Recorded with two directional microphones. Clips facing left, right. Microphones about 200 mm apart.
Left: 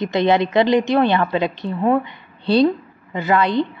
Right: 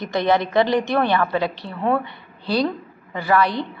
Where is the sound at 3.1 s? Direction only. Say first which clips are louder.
Left 2 dB; 20° left (ahead or behind).